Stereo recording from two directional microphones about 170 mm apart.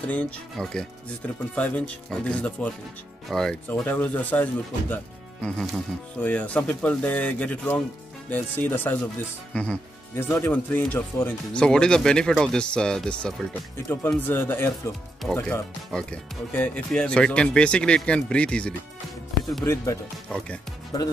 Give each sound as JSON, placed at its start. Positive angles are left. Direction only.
{"t": 0.0, "sound": "speech", "side_deg": 10}
{"t": 20.2, "sound": "speech", "side_deg": 5}